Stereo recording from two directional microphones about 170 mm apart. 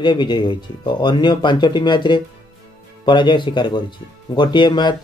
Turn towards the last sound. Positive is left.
turn(degrees=25)  # may be behind; listen again after turning